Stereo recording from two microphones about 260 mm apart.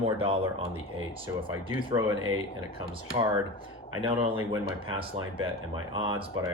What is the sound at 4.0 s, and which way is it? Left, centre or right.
Speech, centre.